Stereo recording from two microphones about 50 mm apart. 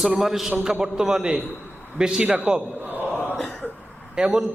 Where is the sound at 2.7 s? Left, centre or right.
Right.